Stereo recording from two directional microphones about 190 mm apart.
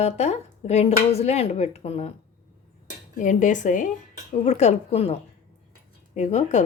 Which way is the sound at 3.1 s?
40° left (ahead or behind).